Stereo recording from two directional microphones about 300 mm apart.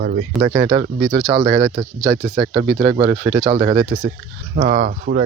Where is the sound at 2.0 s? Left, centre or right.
Centre.